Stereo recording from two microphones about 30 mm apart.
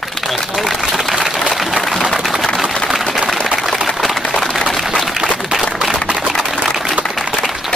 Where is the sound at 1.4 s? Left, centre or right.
Centre.